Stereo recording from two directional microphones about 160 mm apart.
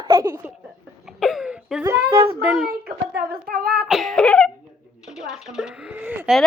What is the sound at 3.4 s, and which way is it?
Speech, 65° right (ahead or behind).